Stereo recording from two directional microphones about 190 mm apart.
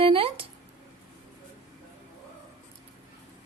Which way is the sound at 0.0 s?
30° right (ahead or behind).